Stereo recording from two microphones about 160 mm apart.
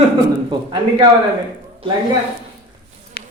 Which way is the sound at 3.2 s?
75° left (ahead or behind).